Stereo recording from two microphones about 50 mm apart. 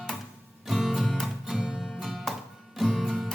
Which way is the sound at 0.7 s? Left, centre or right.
Centre.